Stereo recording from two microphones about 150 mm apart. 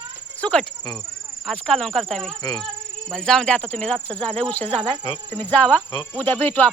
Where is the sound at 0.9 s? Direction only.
Centre (ahead or behind).